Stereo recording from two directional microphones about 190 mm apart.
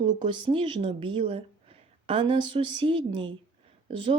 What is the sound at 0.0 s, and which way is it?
A woman's voice, 25° right (ahead or behind).